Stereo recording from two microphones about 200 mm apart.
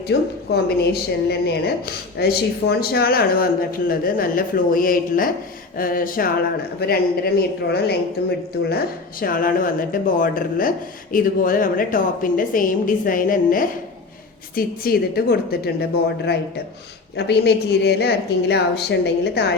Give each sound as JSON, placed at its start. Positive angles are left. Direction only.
{"t": 0.1, "sound": "a woman's voice", "side_deg": 55}
{"t": 9.2, "sound": "a woman's voice", "side_deg": 45}